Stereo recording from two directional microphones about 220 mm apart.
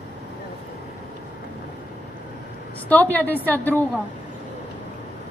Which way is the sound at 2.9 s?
10° left (ahead or behind).